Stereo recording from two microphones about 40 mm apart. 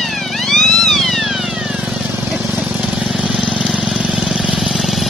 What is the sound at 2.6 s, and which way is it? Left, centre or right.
Vehicle, right.